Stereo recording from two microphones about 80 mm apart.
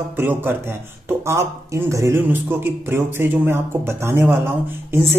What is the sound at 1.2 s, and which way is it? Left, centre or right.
Speech, right.